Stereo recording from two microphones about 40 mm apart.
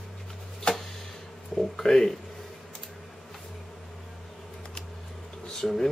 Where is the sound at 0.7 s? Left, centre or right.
Left.